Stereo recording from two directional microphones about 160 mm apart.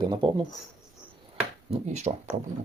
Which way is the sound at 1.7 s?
45° right (ahead or behind).